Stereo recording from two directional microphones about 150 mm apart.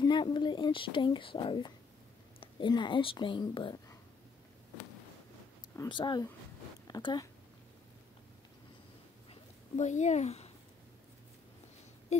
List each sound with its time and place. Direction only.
0.0 s speech: 30° left (ahead or behind)
5.9 s speech: 30° left (ahead or behind)
9.3 s a sound: 50° left (ahead or behind)
12.1 s speech: 50° left (ahead or behind)